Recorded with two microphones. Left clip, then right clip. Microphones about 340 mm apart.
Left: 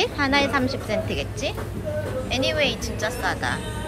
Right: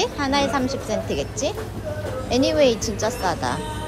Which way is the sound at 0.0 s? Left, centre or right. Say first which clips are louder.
Even; centre.